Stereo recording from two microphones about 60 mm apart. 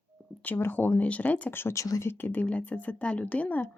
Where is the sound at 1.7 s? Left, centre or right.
Left.